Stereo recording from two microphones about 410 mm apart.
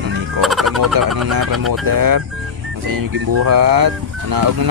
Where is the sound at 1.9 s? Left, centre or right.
Right.